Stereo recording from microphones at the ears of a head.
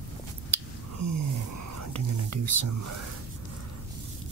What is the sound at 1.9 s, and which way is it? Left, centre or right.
Speech, right.